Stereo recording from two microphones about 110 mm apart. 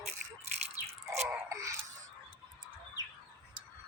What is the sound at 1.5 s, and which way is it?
Wail, 30° right (ahead or behind).